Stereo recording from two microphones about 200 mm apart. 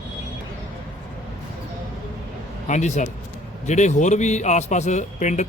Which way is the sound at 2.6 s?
35° left (ahead or behind).